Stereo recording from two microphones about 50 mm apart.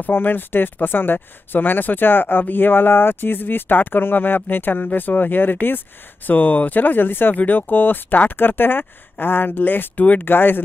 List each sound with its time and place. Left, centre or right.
0.0 s speech: left